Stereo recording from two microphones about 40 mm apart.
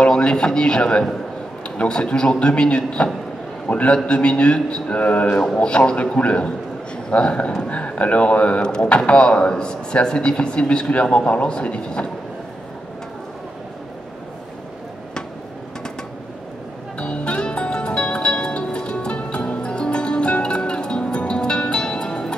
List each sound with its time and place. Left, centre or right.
0.0 s a man's voice: left
2.0 s speech: left
5.4 s speech: left
17.0 s music: left